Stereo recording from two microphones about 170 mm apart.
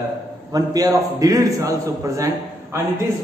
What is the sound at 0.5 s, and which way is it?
A man's voice, 20° right (ahead or behind).